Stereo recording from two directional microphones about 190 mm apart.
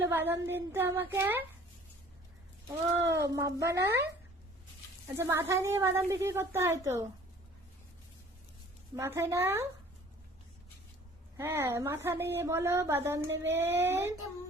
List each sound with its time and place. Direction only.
0.0 s speech: 10° right (ahead or behind)
3.2 s speech: 15° right (ahead or behind)
3.8 s speech: 60° right (ahead or behind)
5.1 s speech: 15° right (ahead or behind)
9.0 s speech: 15° right (ahead or behind)
11.3 s speech: 15° right (ahead or behind)